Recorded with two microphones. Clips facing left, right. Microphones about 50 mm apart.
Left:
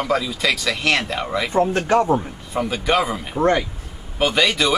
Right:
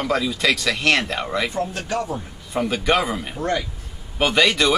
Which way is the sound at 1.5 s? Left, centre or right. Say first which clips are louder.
Left 7 dB; left.